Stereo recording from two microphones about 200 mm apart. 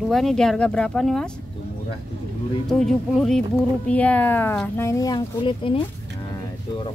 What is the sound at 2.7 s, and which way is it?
Speech, centre (ahead or behind).